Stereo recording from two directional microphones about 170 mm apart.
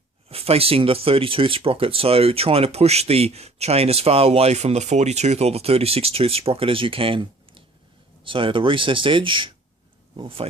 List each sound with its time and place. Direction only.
0.3 s speech: 35° right (ahead or behind)